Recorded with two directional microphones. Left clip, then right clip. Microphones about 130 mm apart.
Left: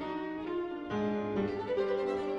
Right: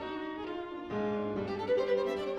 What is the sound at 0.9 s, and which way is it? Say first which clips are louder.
Music: right 1 dB; 20° left (ahead or behind).